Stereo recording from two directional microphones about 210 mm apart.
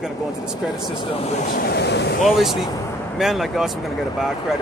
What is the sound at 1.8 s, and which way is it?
Speech, 55° left (ahead or behind).